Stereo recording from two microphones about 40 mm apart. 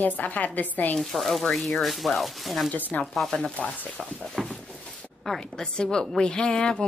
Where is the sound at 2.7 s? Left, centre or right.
Left.